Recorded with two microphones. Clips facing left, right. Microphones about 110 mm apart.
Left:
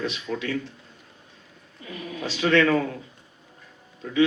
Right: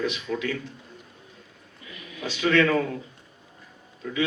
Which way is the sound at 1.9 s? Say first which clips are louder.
Left 3 dB; 40° left (ahead or behind).